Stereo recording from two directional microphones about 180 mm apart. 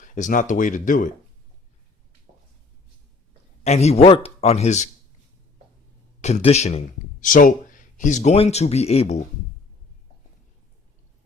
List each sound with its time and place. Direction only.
0.0 s speech: 45° left (ahead or behind)
3.6 s a man's voice: 35° left (ahead or behind)
6.2 s speech: 35° left (ahead or behind)